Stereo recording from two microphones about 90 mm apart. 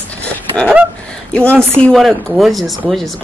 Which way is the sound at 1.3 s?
15° left (ahead or behind).